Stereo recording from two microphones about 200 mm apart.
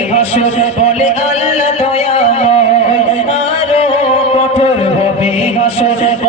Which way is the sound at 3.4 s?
30° left (ahead or behind).